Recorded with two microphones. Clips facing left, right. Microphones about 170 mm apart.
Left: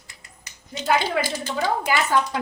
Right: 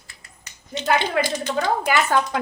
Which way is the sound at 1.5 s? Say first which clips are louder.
Right 2 dB; 55° right (ahead or behind).